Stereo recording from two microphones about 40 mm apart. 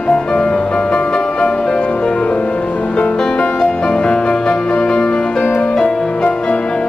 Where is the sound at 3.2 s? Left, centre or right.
Centre.